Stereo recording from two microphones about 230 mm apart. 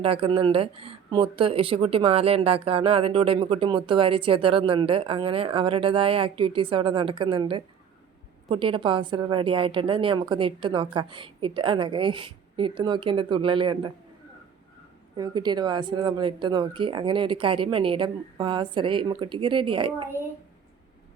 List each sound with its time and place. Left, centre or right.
0.0 s speech: right
15.1 s speech: centre